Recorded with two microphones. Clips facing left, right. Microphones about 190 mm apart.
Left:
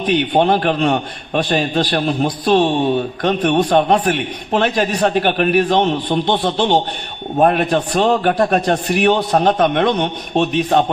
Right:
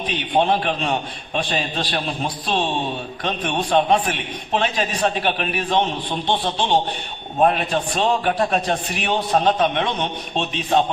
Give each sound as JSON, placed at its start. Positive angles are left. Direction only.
{"t": 0.2, "sound": "a man's voice", "side_deg": 60}